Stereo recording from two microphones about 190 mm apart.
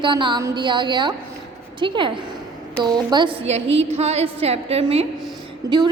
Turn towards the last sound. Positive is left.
turn(degrees=-20)  # may be behind; listen again after turning